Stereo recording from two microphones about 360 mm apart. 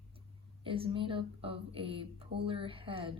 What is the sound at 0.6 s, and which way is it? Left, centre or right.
Speech, centre.